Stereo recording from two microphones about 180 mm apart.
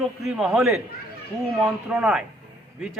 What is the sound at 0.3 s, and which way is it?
A man's voice, centre (ahead or behind).